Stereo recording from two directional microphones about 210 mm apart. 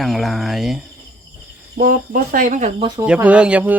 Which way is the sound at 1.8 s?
40° right (ahead or behind).